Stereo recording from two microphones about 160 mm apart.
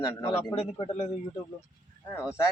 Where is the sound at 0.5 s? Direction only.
40° left (ahead or behind).